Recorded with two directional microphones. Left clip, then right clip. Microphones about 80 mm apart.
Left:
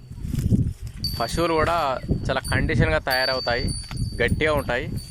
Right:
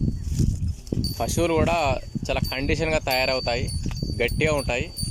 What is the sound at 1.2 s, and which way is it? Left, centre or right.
Speech, right.